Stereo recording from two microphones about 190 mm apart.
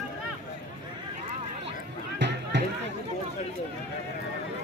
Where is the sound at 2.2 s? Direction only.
65° right (ahead or behind).